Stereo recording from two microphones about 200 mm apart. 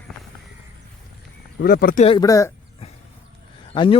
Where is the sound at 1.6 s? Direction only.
50° left (ahead or behind).